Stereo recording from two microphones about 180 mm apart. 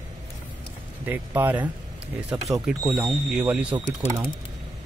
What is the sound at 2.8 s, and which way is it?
Speech, 20° right (ahead or behind).